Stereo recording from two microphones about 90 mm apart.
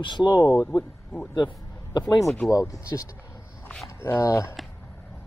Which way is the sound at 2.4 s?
40° left (ahead or behind).